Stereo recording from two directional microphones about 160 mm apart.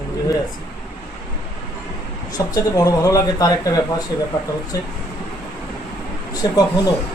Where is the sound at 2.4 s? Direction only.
20° left (ahead or behind).